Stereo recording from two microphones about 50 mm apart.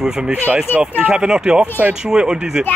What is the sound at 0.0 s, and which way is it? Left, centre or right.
Speech, centre.